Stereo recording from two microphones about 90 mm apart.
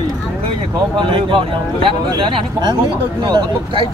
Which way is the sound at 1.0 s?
70° right (ahead or behind).